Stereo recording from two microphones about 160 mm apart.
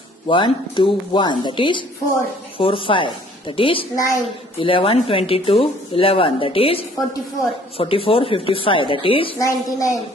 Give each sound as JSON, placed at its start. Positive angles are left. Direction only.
{"t": 0.3, "sound": "speech", "side_deg": 30}
{"t": 3.9, "sound": "a woman's voice", "side_deg": 20}
{"t": 4.6, "sound": "speech", "side_deg": 35}
{"t": 9.4, "sound": "a woman's voice", "side_deg": 20}